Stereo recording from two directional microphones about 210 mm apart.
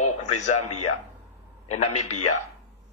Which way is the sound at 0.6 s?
90° left.